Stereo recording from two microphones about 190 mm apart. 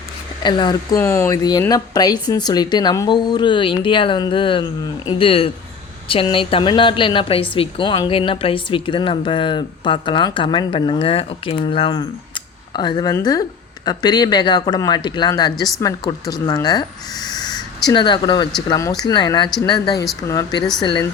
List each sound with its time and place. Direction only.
0.4 s a woman's voice: 25° left (ahead or behind)